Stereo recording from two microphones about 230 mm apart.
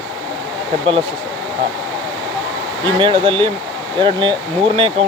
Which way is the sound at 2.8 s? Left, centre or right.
Right.